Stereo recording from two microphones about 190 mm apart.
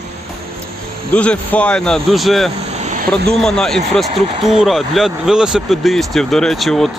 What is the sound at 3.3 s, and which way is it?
Speech, 5° left (ahead or behind).